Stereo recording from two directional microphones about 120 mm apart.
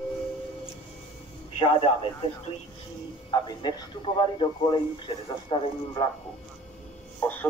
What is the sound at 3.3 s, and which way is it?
A man's voice, 35° left (ahead or behind).